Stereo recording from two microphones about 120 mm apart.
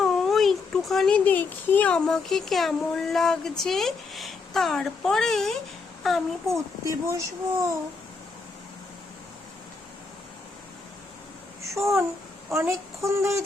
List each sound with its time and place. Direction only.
0.0 s a child's voice: centre (ahead or behind)
6.8 s speech: 25° right (ahead or behind)
11.7 s speech: 25° right (ahead or behind)